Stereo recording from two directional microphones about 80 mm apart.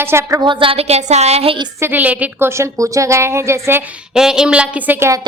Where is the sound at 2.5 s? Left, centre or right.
Right.